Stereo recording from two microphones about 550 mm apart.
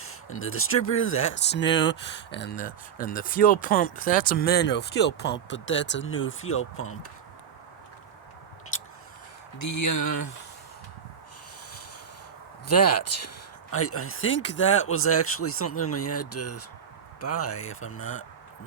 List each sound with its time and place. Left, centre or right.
0.0 s speech: left
9.6 s speech: left
12.6 s speech: left